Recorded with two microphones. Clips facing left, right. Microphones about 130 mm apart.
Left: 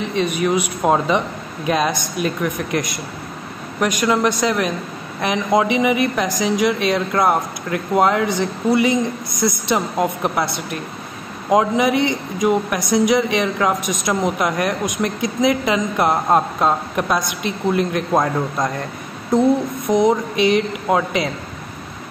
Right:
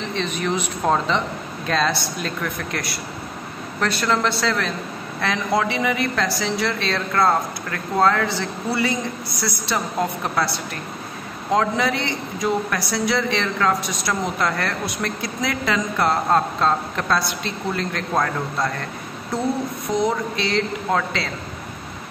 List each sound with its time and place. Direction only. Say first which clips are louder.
0.1 s a man's voice: left 5 dB; 10° left (ahead or behind)
19.3 s music: left 9 dB; 20° left (ahead or behind)
19.9 s a man's voice: left 6 dB; 20° left (ahead or behind)